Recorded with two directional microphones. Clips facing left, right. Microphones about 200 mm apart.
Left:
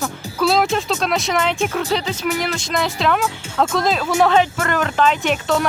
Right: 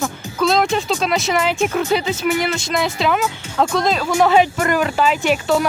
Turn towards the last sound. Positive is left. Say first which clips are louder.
# right 2 dB
turn(degrees=-5)  # may be behind; listen again after turning